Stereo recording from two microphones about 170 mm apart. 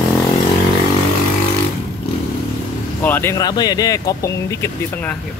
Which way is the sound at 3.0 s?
10° left (ahead or behind).